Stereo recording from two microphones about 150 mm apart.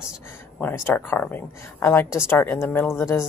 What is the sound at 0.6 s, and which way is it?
Speech, 15° left (ahead or behind).